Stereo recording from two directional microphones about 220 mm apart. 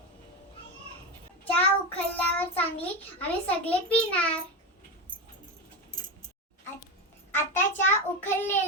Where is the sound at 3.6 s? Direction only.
5° left (ahead or behind).